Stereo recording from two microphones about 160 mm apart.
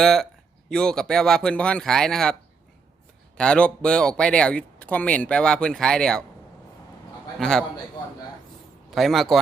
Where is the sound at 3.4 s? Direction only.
5° left (ahead or behind).